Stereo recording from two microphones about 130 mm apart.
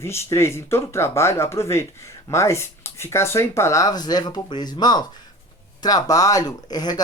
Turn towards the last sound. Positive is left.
turn(degrees=30)  # may be behind; listen again after turning